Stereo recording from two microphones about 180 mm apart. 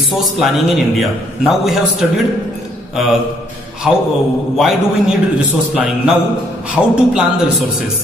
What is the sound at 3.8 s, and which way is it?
Speech, centre (ahead or behind).